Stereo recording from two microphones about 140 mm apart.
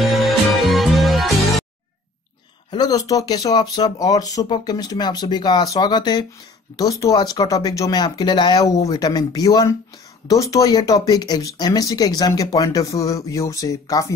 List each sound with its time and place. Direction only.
0.0 s music: centre (ahead or behind)
2.7 s speech: 30° left (ahead or behind)